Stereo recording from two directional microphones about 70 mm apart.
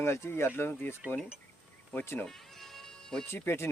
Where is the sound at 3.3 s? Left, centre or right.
Left.